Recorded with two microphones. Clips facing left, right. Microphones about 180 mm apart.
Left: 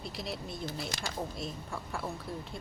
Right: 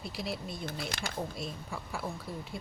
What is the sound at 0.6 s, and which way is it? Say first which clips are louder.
Speech: even; 60° right (ahead or behind).